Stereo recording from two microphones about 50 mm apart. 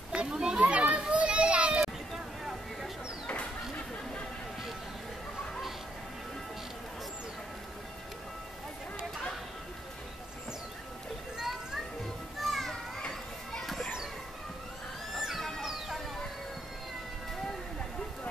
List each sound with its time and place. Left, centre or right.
0.1 s children playing: centre
11.3 s children playing: centre
12.4 s children playing: centre
15.1 s music: centre